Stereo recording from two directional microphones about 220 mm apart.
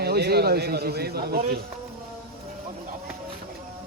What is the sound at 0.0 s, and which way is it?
A man's voice, 45° right (ahead or behind).